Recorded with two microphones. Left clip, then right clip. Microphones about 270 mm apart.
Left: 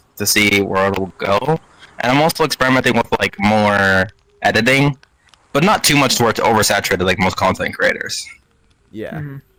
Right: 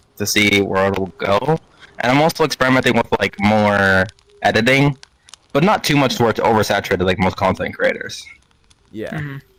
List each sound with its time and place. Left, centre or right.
0.2 s speech: centre
4.9 s a sound: right
5.5 s speech: centre
8.9 s speech: centre